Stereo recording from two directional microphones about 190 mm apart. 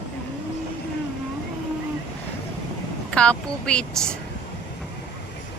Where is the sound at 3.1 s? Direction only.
5° left (ahead or behind).